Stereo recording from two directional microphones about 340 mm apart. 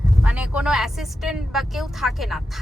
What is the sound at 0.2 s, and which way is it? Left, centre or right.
Speech, centre.